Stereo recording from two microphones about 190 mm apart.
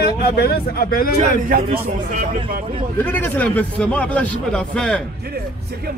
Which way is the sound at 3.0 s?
10° left (ahead or behind).